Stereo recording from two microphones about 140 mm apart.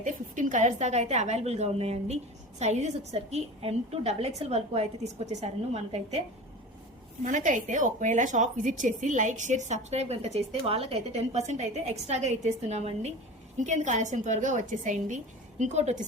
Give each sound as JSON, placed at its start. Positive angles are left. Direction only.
{"t": 0.0, "sound": "a woman's voice", "side_deg": -65}
{"t": 7.3, "sound": "a woman's voice", "side_deg": -65}